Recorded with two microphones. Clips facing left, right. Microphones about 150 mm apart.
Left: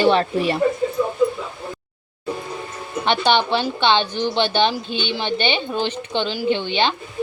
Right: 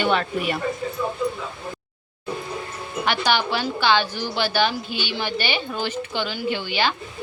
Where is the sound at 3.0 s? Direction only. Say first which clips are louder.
Left 4 dB; 25° left (ahead or behind).